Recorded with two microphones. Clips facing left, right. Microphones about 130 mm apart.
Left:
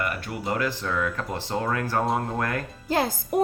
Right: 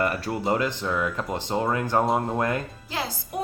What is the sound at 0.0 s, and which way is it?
Speech, 30° right (ahead or behind).